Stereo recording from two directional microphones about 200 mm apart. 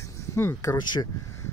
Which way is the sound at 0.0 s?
15° left (ahead or behind).